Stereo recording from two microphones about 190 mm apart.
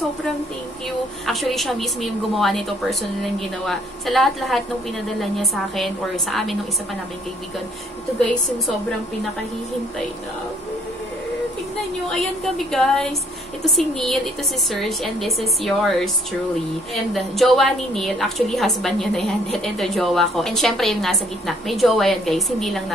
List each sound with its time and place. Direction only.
1.2 s a woman's voice: centre (ahead or behind)
12.5 s a woman's voice: centre (ahead or behind)